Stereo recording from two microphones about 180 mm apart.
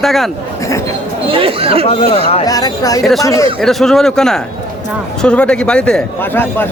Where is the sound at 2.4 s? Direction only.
20° left (ahead or behind).